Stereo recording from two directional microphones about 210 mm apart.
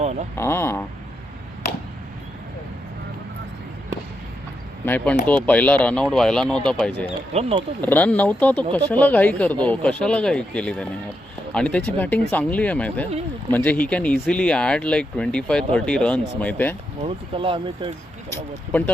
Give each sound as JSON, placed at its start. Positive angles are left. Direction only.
{"t": 0.0, "sound": "a sound", "side_deg": -30}
{"t": 0.3, "sound": "speech", "side_deg": 10}
{"t": 4.9, "sound": "speech", "side_deg": 5}
{"t": 7.3, "sound": "speech", "side_deg": -30}
{"t": 7.8, "sound": "speech", "side_deg": 10}
{"t": 17.0, "sound": "speech", "side_deg": -25}